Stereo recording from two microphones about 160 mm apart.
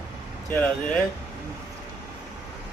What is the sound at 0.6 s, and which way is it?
Speech, 5° left (ahead or behind).